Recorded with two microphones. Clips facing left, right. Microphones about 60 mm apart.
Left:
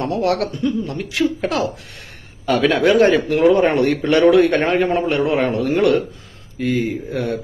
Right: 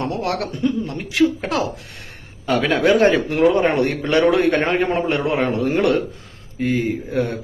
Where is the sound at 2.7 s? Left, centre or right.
Right.